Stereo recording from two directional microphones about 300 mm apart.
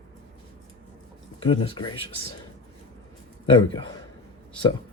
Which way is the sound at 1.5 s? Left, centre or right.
Centre.